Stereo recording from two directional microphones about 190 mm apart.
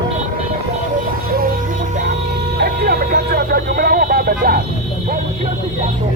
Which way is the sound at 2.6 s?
55° right (ahead or behind).